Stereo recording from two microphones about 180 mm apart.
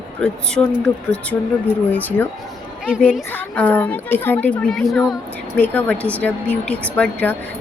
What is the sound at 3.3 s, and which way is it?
Speech, 10° left (ahead or behind).